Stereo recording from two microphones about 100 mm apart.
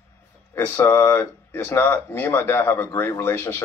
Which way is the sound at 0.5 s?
25° left (ahead or behind).